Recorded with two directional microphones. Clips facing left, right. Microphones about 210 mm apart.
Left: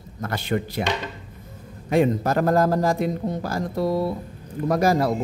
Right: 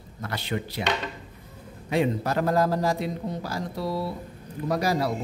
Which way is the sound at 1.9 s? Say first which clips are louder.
Left 5 dB; 45° left (ahead or behind).